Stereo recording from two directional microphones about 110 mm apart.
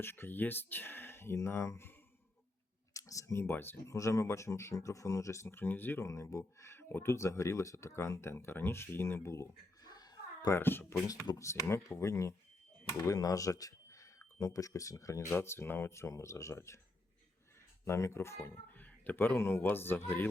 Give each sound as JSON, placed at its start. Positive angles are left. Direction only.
{"t": 0.0, "sound": "speech", "side_deg": 20}
{"t": 2.9, "sound": "speech", "side_deg": 30}
{"t": 9.8, "sound": "a sound", "side_deg": 35}
{"t": 10.5, "sound": "speech", "side_deg": 20}
{"t": 11.0, "sound": "speech", "side_deg": 35}
{"t": 17.8, "sound": "speech", "side_deg": 25}